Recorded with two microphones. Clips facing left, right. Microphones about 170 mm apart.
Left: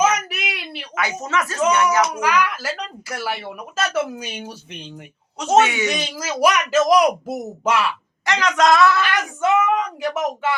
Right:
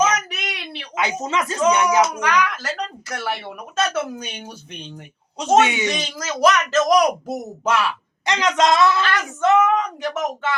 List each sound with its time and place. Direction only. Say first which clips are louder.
0.0 s a sound: left 1 dB; 5° left (ahead or behind)
0.9 s speech: right 1 dB; 20° right (ahead or behind)
2.1 s speech: left 1 dB; 5° left (ahead or behind)
5.5 s speech: left 1 dB; 20° right (ahead or behind)
5.9 s speech: left 1 dB; 5° left (ahead or behind)
8.2 s speech: even; 20° right (ahead or behind)
9.0 s speech: even; 10° left (ahead or behind)